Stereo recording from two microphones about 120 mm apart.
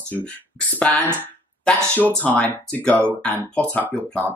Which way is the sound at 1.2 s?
10° left (ahead or behind).